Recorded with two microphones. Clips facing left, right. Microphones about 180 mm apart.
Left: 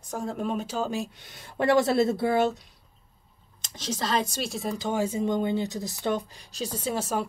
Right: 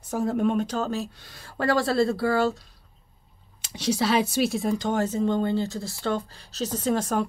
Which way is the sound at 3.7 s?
10° right (ahead or behind).